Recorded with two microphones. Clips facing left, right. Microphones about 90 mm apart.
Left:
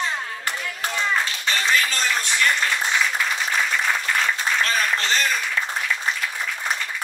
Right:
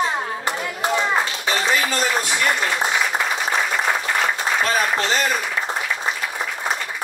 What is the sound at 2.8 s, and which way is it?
Applause, 45° right (ahead or behind).